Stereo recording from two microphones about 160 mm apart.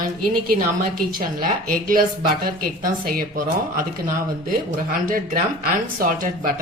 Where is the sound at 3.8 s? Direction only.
60° right (ahead or behind).